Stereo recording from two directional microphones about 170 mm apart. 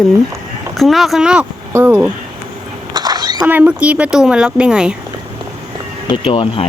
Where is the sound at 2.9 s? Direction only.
25° right (ahead or behind).